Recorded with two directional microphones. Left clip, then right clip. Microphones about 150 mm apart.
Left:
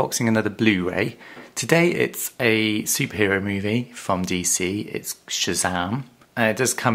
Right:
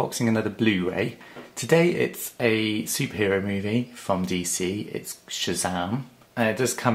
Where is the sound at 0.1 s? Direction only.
40° left (ahead or behind).